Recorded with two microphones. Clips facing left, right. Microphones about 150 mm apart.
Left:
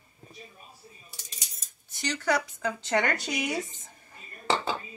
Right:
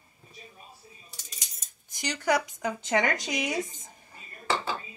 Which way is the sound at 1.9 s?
15° right (ahead or behind).